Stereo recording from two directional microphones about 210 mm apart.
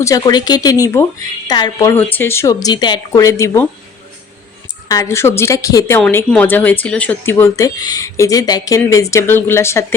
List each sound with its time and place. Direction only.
0.0 s speech: 15° left (ahead or behind)
4.9 s speech: 15° left (ahead or behind)